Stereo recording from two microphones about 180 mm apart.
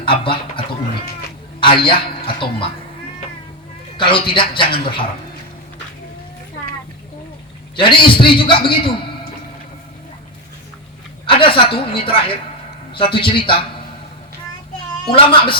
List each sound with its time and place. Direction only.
0.0 s speech: 30° left (ahead or behind)
1.6 s a woman's voice: 30° left (ahead or behind)
3.9 s a woman's voice: 30° left (ahead or behind)
7.8 s a woman's voice: 25° left (ahead or behind)
11.3 s a woman's voice: 30° left (ahead or behind)